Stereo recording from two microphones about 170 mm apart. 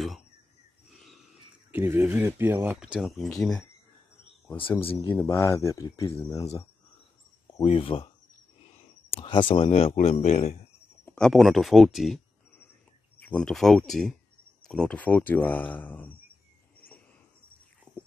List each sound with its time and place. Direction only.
1.7 s speech: 15° right (ahead or behind); by 3.6 s 5° left (ahead or behind)
4.6 s speech: 30° left (ahead or behind)
5.3 s speech: 15° left (ahead or behind)
7.6 s speech: 35° left (ahead or behind)
9.1 s speech: 30° left (ahead or behind)
11.1 s speech: 5° left (ahead or behind)
13.2 s speech: 5° left (ahead or behind)